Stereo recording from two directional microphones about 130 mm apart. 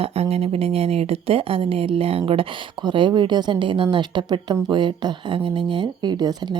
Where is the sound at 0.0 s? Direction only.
50° right (ahead or behind).